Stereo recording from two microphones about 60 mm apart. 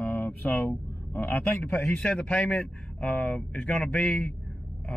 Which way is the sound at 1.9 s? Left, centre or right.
Centre.